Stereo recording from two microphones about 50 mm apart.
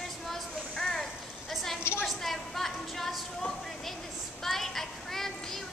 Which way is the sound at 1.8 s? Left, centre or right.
Left.